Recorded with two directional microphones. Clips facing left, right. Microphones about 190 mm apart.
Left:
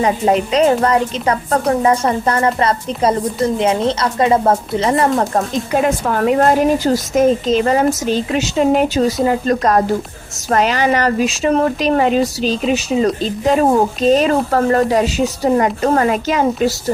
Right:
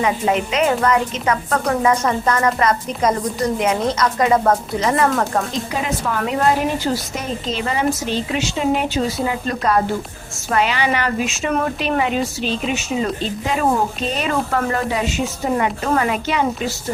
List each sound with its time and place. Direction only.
0.0 s a woman's voice: 35° left (ahead or behind)
5.7 s a woman's voice: 50° left (ahead or behind)